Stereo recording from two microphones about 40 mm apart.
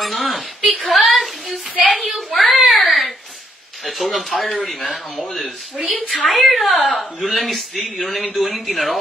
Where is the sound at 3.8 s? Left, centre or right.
Centre.